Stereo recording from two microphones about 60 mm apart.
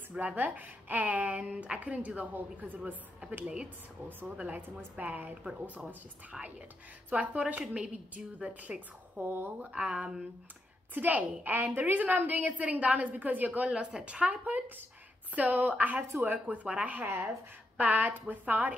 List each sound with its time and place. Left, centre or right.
0.1 s a woman's voice: right
7.1 s a woman's voice: right
9.2 s speech: right
9.7 s a woman's voice: centre